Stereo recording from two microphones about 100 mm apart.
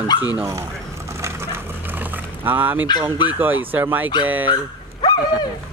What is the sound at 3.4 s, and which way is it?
Speech, 20° right (ahead or behind).